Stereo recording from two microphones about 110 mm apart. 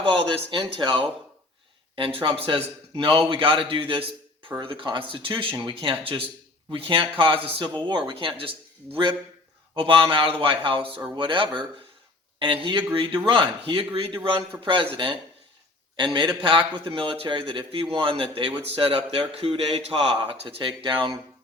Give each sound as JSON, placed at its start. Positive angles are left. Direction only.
{"t": 0.0, "sound": "a man's voice", "side_deg": -55}
{"t": 7.7, "sound": "a man's voice", "side_deg": -45}